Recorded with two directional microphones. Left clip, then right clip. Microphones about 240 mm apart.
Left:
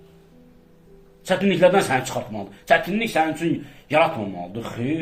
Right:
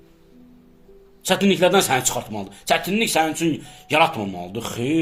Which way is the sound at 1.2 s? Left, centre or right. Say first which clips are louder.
Left 1 dB; right.